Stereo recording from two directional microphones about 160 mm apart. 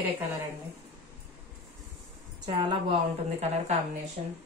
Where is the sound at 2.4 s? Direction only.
30° right (ahead or behind).